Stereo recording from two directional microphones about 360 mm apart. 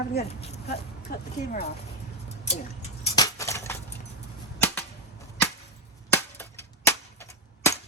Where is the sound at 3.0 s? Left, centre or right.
Centre.